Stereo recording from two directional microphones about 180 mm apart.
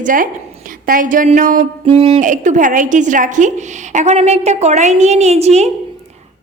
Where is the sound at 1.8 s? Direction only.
35° right (ahead or behind).